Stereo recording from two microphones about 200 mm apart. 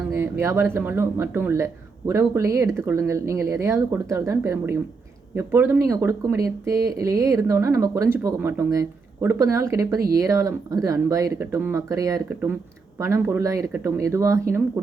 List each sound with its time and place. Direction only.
0.1 s speech: 15° right (ahead or behind)